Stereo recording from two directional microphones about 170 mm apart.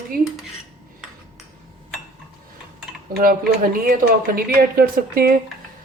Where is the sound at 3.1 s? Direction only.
60° right (ahead or behind).